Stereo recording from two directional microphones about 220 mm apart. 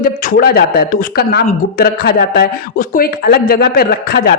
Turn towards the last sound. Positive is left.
turn(degrees=45)  # may be behind; listen again after turning